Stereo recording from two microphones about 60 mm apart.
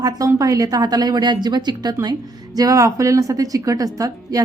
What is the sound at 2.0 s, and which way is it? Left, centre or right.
Speech, right.